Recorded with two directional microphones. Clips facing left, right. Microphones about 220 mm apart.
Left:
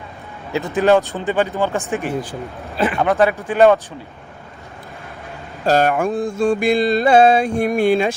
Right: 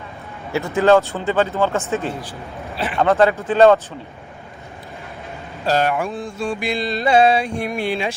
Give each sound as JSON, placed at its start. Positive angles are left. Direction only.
{"t": 0.5, "sound": "speech", "side_deg": 15}
{"t": 5.6, "sound": "mantra", "side_deg": 45}